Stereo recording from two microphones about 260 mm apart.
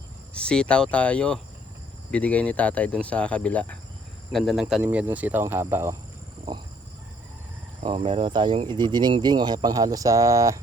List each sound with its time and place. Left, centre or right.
0.3 s speech: centre
7.9 s speech: right